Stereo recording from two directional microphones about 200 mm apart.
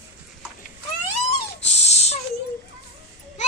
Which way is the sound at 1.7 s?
35° left (ahead or behind).